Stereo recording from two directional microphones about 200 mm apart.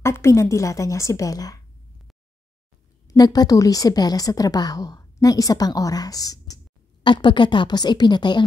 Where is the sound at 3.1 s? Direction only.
20° left (ahead or behind).